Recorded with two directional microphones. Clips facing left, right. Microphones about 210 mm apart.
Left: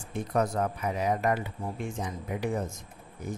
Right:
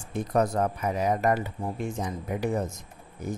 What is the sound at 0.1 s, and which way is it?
Speech, 40° right (ahead or behind).